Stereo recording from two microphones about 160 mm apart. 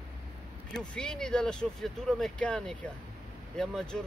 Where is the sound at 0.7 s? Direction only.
5° left (ahead or behind).